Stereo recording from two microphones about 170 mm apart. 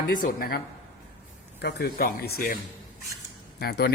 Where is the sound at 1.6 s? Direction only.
70° left (ahead or behind).